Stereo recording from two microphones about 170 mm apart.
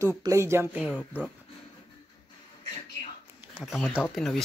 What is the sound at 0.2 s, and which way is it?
Speech, 15° right (ahead or behind).